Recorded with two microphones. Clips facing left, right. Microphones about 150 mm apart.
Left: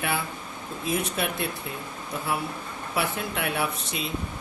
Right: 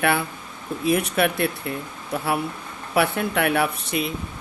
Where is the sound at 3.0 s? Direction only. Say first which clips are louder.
Right 8 dB; 65° right (ahead or behind).